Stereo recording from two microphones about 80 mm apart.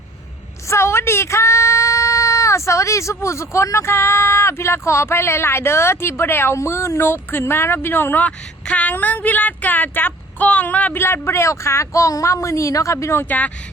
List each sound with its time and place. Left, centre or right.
0.7 s speech: left
13.2 s speech: centre